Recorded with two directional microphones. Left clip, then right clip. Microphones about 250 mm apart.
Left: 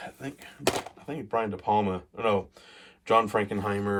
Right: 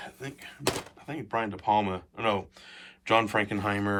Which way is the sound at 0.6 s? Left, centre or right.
Left.